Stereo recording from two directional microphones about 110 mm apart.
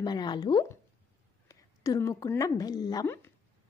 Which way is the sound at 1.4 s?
30° left (ahead or behind).